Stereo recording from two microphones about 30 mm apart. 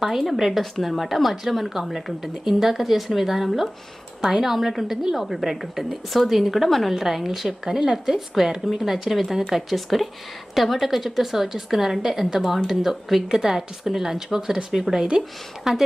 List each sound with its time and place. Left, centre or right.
0.0 s speech: centre
0.6 s a woman's voice: centre
6.9 s speech: centre
7.6 s a woman's voice: centre
15.7 s speech: centre